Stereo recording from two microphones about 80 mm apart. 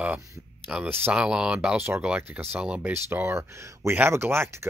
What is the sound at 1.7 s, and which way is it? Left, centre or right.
Speech, right.